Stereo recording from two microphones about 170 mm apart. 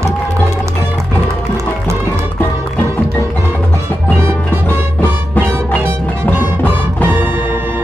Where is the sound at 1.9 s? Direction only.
15° right (ahead or behind).